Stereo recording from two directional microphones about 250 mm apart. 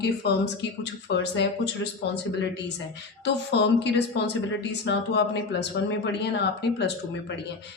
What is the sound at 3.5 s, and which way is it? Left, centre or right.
Speech, left.